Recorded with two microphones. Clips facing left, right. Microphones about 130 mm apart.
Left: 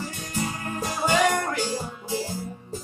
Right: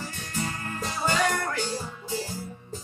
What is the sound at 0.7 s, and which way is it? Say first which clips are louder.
Music: left 4 dB; 15° left (ahead or behind).